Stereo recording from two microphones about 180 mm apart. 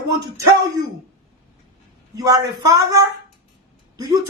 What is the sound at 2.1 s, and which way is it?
Speech, 20° right (ahead or behind).